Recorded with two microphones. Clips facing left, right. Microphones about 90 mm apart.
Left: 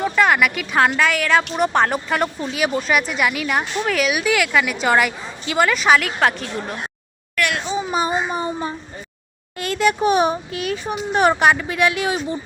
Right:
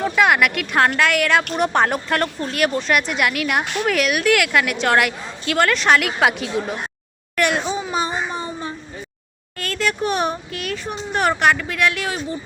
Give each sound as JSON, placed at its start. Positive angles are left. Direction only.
{"t": 0.0, "sound": "a woman's voice", "side_deg": 0}
{"t": 3.6, "sound": "speech", "side_deg": -65}
{"t": 3.8, "sound": "a woman's voice", "side_deg": 0}
{"t": 7.3, "sound": "a child's voice", "side_deg": -25}
{"t": 7.8, "sound": "speech", "side_deg": 10}